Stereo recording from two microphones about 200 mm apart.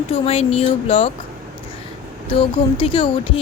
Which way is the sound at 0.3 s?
30° left (ahead or behind).